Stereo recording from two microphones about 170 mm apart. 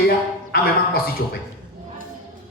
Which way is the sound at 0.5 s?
60° left (ahead or behind).